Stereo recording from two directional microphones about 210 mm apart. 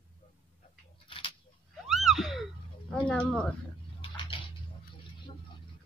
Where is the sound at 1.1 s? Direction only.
25° left (ahead or behind).